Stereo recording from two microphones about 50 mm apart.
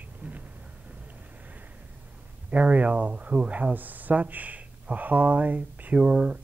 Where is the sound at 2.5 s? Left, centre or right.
Right.